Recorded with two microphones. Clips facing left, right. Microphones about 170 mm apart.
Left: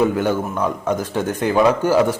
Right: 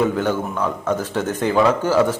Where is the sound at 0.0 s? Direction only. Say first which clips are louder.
Left 2 dB; 10° left (ahead or behind).